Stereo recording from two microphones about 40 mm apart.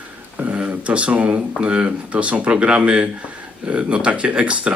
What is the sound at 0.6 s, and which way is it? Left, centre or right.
Speech, right.